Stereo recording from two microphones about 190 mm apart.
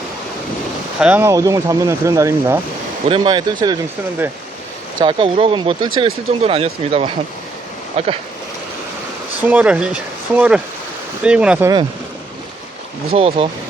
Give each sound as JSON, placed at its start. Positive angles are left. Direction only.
{"t": 0.9, "sound": "speech", "side_deg": -5}
{"t": 5.0, "sound": "speech", "side_deg": -25}
{"t": 9.5, "sound": "speech", "side_deg": -5}
{"t": 13.1, "sound": "speech", "side_deg": -30}